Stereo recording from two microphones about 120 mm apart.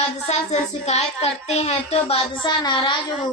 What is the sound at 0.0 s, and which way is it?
Speech, 70° left (ahead or behind).